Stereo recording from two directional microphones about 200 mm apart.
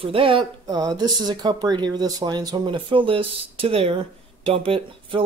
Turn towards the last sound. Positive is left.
turn(degrees=-25)  # may be behind; listen again after turning